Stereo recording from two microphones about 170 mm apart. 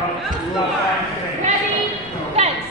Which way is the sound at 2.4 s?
40° right (ahead or behind).